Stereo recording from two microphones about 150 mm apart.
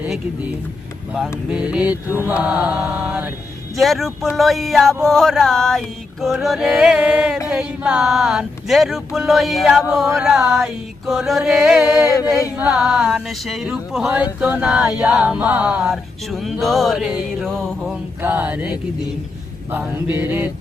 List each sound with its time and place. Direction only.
1.5 s chant: 5° right (ahead or behind)
3.8 s speech: centre (ahead or behind)
12.0 s a sound: 25° left (ahead or behind)
12.5 s speech: 5° right (ahead or behind)
18.2 s chant: 10° right (ahead or behind)
19.7 s chant: 10° right (ahead or behind)